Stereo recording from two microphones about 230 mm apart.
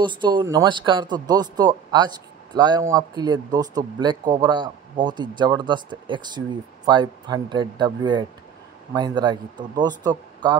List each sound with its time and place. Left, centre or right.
0.0 s speech: centre